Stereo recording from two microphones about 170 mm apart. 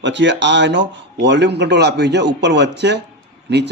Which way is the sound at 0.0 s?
90° right.